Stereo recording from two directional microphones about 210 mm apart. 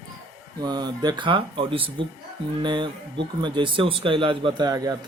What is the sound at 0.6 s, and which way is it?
Speech, 20° right (ahead or behind).